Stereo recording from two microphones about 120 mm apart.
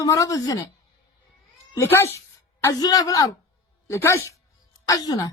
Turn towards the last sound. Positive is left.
turn(degrees=30)  # may be behind; listen again after turning